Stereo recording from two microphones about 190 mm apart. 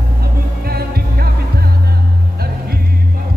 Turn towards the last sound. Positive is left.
turn(degrees=-55)  # may be behind; listen again after turning